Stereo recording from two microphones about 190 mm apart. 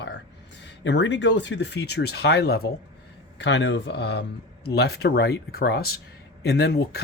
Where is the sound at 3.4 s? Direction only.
70° left (ahead or behind).